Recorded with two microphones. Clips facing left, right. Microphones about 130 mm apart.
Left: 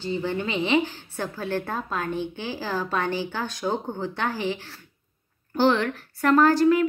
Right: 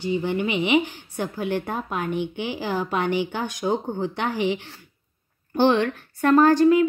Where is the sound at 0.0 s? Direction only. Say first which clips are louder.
Right 3 dB; 15° right (ahead or behind).